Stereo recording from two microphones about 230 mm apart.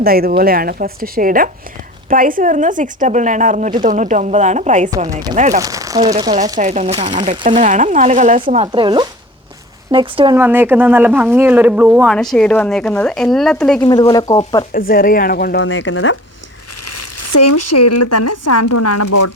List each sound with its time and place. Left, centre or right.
0.0 s a woman's voice: right
5.5 s speech: centre
6.6 s a woman's voice: right
10.4 s speech: centre
13.8 s speech: centre
14.7 s speech: left
15.6 s speech: left
16.8 s speech: left